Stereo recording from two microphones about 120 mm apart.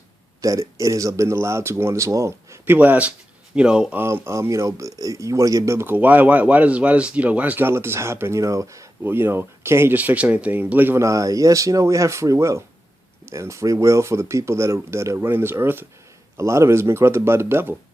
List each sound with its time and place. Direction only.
0.4 s speech: 25° right (ahead or behind)
2.7 s speech: 15° right (ahead or behind)
4.0 s speech: 20° right (ahead or behind)